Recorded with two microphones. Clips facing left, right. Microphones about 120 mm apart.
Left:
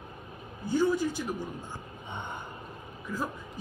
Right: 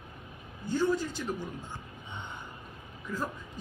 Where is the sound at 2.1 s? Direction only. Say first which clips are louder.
Left 5 dB; 55° left (ahead or behind).